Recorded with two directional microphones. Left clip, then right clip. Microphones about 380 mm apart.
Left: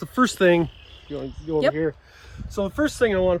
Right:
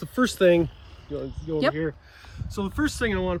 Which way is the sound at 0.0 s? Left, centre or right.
Centre.